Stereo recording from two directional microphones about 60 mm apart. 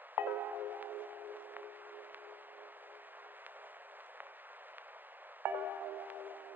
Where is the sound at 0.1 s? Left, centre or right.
Right.